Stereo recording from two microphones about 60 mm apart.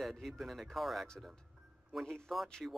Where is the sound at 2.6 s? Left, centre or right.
Centre.